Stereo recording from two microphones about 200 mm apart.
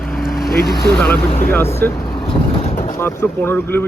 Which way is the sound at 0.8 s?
10° left (ahead or behind).